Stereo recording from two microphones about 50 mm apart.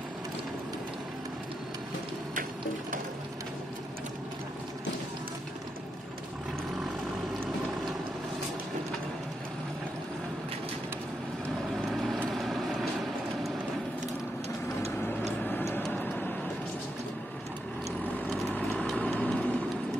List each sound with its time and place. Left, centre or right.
11.7 s vehicle: centre
15.0 s vehicle: left
18.5 s vehicle: left